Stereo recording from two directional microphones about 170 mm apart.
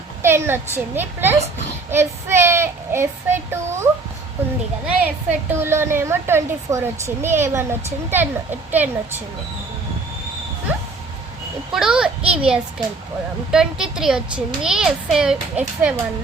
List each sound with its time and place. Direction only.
0.2 s a woman's voice: 15° right (ahead or behind)
4.9 s a woman's voice: 10° right (ahead or behind)
11.7 s a child's voice: 5° right (ahead or behind)